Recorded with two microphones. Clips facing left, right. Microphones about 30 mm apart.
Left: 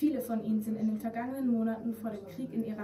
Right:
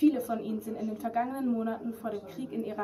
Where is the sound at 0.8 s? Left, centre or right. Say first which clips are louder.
Left 3 dB; right.